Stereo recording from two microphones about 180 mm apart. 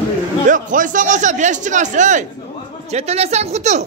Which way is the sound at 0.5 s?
45° right (ahead or behind).